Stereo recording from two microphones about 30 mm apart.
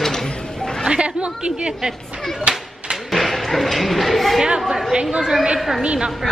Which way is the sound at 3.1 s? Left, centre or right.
Centre.